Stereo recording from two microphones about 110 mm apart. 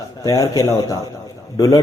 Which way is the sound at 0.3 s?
35° left (ahead or behind).